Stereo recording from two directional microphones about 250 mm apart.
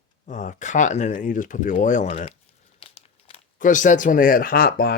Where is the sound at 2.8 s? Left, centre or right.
Left.